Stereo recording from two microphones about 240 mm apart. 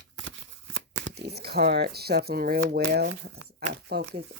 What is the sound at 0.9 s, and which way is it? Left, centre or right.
Speech, right.